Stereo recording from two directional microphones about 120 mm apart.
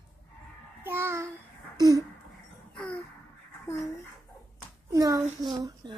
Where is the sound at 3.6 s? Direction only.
25° left (ahead or behind).